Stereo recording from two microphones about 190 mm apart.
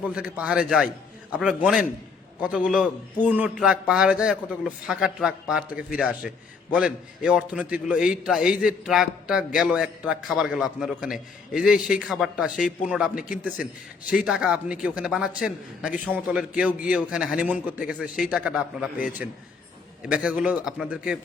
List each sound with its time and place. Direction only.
0.0 s a man's voice: 5° right (ahead or behind)